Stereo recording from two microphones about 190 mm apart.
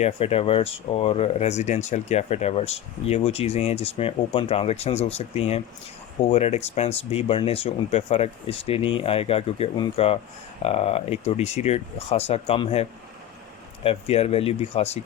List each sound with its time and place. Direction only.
0.0 s speech: 30° left (ahead or behind)